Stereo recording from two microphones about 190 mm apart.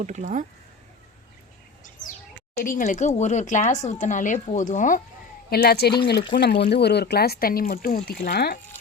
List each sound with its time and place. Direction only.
0.0 s speech: 40° right (ahead or behind)
2.6 s speech: 45° left (ahead or behind)
5.5 s speech: 55° left (ahead or behind)